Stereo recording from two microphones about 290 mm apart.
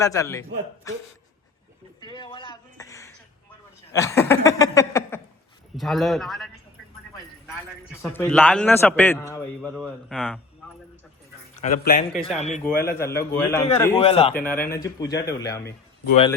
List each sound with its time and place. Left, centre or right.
0.0 s speech: centre
2.0 s a sound: centre
3.9 s speech: centre
5.7 s speech: centre
8.0 s speech: centre
9.6 s speech: centre
11.5 s a man's voice: left
12.6 s speech: centre
14.0 s a man's voice: centre
14.4 s speech: centre